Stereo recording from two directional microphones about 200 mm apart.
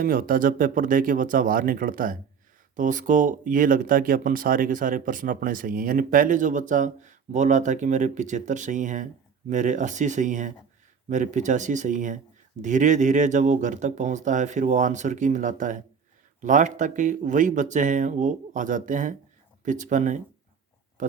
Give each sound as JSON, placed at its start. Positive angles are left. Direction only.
{"t": 0.0, "sound": "speech", "side_deg": -45}